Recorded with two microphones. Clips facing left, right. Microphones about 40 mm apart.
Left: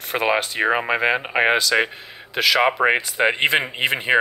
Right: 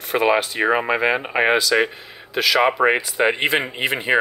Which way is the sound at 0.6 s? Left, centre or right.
Left.